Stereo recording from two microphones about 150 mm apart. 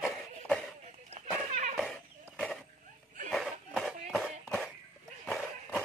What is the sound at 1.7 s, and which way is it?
Chicken, 5° right (ahead or behind).